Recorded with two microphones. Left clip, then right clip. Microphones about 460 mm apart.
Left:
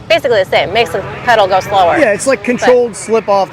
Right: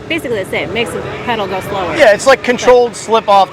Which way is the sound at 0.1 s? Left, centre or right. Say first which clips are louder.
Left 7 dB; left.